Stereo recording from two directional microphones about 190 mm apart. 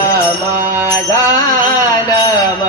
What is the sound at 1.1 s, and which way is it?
Music, 20° left (ahead or behind).